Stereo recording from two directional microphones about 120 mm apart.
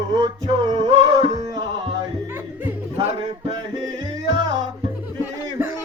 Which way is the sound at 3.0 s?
55° right (ahead or behind).